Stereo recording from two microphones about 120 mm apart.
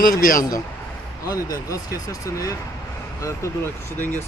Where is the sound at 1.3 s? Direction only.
30° left (ahead or behind).